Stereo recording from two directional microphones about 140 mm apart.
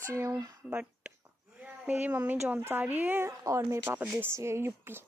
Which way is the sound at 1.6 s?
10° right (ahead or behind).